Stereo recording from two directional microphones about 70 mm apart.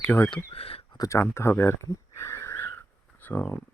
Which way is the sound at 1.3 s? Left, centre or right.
Left.